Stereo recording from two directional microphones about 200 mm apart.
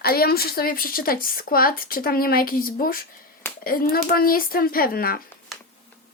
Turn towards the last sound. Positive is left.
turn(degrees=45)  # may be behind; listen again after turning